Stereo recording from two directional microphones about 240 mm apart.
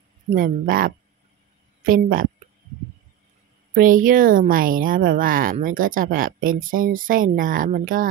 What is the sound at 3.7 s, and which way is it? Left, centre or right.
A woman's voice, right.